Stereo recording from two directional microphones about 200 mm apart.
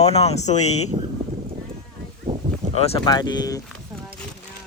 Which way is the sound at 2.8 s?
25° left (ahead or behind).